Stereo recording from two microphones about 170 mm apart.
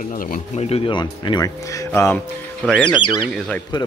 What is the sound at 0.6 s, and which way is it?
Speech, 35° left (ahead or behind).